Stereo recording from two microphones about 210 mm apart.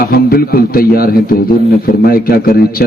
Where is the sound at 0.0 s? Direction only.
45° left (ahead or behind).